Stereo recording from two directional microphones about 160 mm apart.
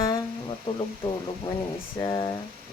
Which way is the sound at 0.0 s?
20° left (ahead or behind).